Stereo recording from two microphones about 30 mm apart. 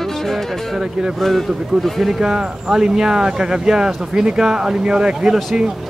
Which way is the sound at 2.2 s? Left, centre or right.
Right.